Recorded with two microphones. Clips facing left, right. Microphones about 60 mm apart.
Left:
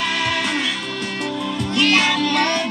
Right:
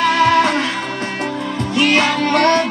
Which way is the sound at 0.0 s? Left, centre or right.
Right.